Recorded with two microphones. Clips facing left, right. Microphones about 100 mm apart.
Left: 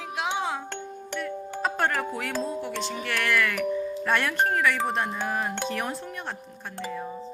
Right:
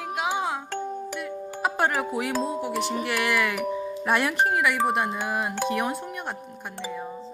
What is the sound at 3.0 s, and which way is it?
Speech, 15° right (ahead or behind).